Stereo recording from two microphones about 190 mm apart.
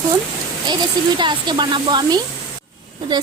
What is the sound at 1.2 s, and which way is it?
A woman's voice, 25° right (ahead or behind).